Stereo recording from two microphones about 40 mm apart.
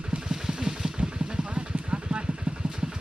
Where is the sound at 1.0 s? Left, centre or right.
Right.